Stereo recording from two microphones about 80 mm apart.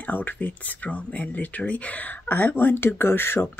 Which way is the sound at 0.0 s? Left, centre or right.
Left.